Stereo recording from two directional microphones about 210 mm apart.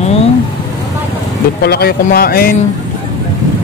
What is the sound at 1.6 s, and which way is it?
Speech, 50° left (ahead or behind).